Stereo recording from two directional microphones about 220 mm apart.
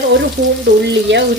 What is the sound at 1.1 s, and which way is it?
Speech, 55° right (ahead or behind).